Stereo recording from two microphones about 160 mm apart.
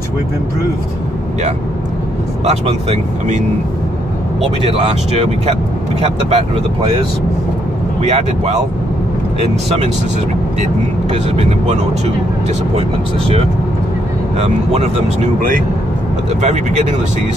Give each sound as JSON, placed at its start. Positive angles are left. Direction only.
{"t": 2.4, "sound": "speech", "side_deg": -40}
{"t": 4.6, "sound": "speech", "side_deg": -40}
{"t": 8.1, "sound": "speech", "side_deg": -45}
{"t": 10.6, "sound": "speech", "side_deg": -40}
{"t": 14.4, "sound": "speech", "side_deg": -40}
{"t": 16.3, "sound": "speech", "side_deg": -50}